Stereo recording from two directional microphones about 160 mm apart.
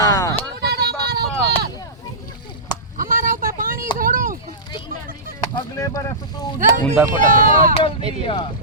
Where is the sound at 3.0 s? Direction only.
60° right (ahead or behind).